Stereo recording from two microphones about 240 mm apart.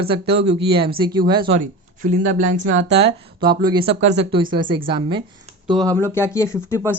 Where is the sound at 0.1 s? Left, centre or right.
Right.